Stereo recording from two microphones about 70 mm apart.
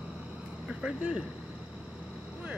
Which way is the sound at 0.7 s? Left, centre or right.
Centre.